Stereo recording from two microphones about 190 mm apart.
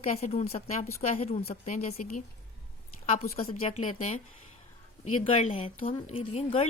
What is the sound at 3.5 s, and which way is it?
A woman's voice, 30° left (ahead or behind).